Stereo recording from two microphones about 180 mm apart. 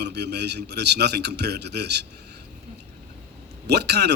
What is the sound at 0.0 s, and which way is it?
A man's voice, 65° right (ahead or behind).